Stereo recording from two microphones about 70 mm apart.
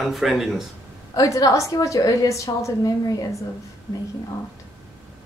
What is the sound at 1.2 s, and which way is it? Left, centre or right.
A woman's voice, left.